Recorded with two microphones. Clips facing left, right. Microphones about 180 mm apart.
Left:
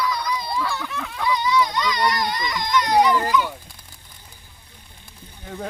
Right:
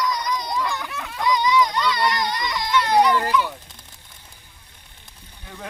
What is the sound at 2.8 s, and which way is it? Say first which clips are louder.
Speech: even; 10° left (ahead or behind).